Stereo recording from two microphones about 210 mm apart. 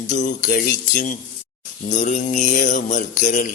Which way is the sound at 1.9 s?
35° left (ahead or behind).